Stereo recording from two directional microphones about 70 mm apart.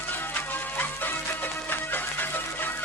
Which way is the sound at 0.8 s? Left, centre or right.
Left.